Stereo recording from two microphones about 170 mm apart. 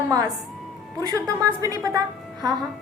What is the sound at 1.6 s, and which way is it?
Speech, 20° right (ahead or behind).